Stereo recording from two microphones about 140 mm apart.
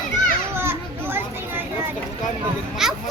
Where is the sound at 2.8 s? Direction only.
5° right (ahead or behind).